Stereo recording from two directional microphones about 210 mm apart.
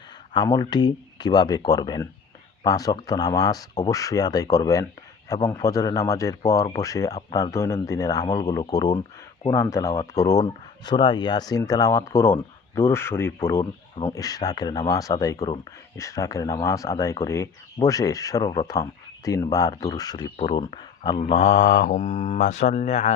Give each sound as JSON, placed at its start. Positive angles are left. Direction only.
{"t": 0.3, "sound": "speech", "side_deg": 20}